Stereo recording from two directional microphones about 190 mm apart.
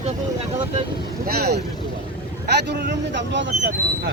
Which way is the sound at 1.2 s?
55° right (ahead or behind).